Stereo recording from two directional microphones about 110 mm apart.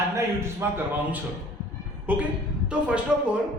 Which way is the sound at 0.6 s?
25° right (ahead or behind).